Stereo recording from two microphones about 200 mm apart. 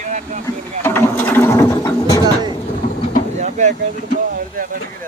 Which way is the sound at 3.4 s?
35° right (ahead or behind).